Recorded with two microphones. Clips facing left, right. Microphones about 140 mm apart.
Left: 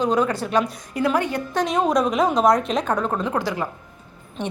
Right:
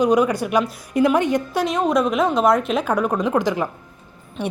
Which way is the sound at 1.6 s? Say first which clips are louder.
Left 1 dB; centre (ahead or behind).